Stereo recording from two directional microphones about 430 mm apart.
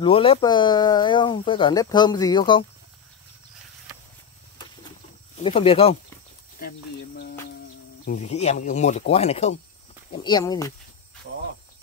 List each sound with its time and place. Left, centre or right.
0.0 s speech: centre
5.4 s speech: centre
8.0 s speech: centre